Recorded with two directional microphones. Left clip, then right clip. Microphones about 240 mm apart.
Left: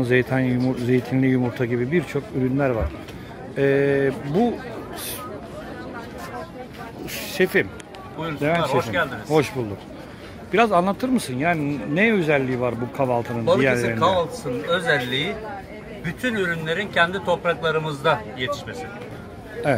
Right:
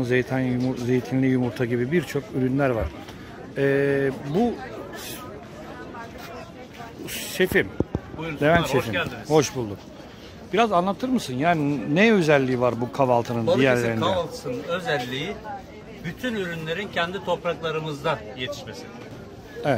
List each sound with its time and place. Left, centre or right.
0.0 s speech: centre
7.1 s speech: centre
8.4 s speech: right
8.7 s speech: centre
13.9 s speech: centre
16.2 s speech: centre
19.6 s speech: centre